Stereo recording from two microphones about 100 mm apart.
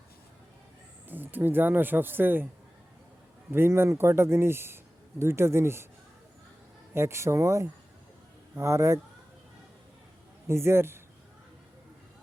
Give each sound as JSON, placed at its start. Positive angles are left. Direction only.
{"t": 1.0, "sound": "speech", "side_deg": -20}
{"t": 3.5, "sound": "speech", "side_deg": -25}
{"t": 6.9, "sound": "speech", "side_deg": -25}
{"t": 10.4, "sound": "a man's voice", "side_deg": -25}